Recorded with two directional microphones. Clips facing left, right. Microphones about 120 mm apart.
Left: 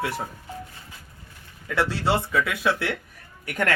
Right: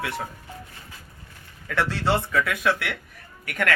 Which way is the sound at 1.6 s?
10° left (ahead or behind).